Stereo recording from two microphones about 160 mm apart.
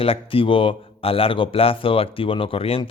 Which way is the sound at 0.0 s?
35° left (ahead or behind).